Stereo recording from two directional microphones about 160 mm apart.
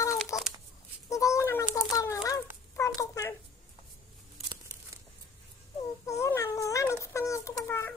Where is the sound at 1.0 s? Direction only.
20° left (ahead or behind).